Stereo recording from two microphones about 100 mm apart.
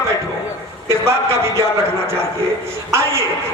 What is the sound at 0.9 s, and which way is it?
Speech, 25° right (ahead or behind).